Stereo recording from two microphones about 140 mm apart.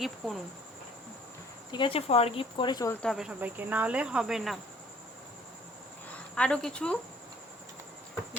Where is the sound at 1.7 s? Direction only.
40° left (ahead or behind).